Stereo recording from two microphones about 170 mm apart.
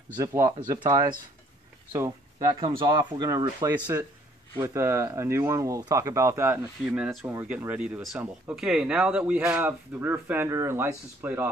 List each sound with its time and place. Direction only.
0.2 s speech: 20° right (ahead or behind)
1.9 s speech: 20° right (ahead or behind)